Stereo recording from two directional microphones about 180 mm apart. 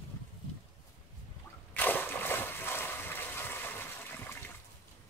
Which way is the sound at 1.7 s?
10° left (ahead or behind).